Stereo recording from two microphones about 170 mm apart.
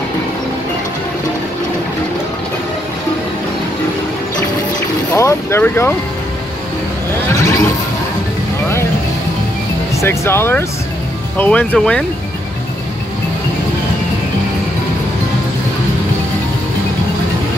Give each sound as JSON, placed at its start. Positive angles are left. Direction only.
{"t": 5.1, "sound": "vehicle", "side_deg": 15}
{"t": 7.3, "sound": "a sound", "side_deg": 20}
{"t": 9.9, "sound": "speech", "side_deg": 15}